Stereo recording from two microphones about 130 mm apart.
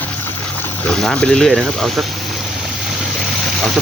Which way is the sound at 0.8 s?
5° left (ahead or behind).